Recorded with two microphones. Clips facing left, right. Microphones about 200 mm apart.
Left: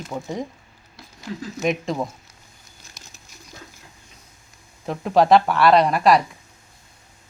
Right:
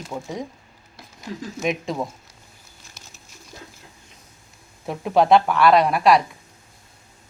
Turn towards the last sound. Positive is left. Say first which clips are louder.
# even
turn(degrees=0)  # may be behind; listen again after turning